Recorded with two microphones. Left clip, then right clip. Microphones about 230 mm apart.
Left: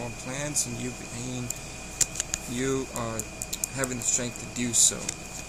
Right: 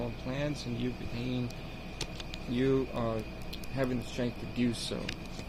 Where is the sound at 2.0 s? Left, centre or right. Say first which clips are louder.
Left 12 dB; left.